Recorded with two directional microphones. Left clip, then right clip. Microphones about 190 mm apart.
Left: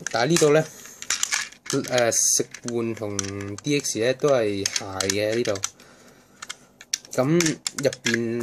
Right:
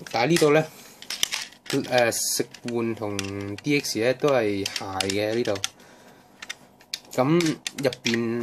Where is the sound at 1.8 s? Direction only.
15° left (ahead or behind).